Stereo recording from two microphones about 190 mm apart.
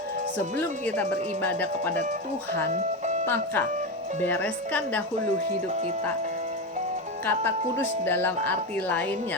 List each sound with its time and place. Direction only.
0.6 s speech: 10° left (ahead or behind)
3.2 s speech: 10° left (ahead or behind)
5.6 s speech: 35° right (ahead or behind)
7.3 s speech: 10° left (ahead or behind)